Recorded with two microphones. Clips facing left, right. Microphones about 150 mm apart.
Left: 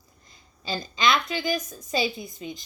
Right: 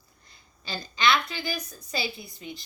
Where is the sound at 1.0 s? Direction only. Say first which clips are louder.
Left 1 dB; 20° left (ahead or behind).